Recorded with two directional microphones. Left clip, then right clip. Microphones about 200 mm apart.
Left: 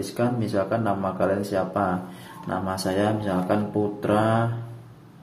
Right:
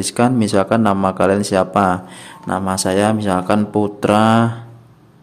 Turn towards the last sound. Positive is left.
turn(degrees=-45)  # may be behind; listen again after turning